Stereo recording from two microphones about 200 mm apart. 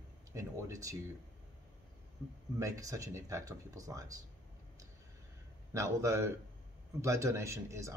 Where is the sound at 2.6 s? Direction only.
15° right (ahead or behind).